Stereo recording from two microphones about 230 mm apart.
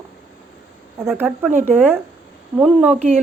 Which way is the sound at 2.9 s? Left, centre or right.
Right.